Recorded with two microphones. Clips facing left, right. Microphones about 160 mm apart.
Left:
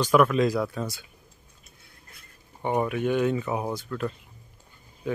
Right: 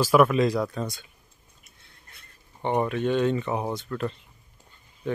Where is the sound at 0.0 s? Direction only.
5° right (ahead or behind).